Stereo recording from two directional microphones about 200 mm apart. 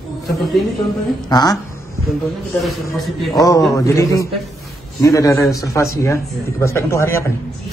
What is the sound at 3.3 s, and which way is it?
A man's voice, 15° left (ahead or behind).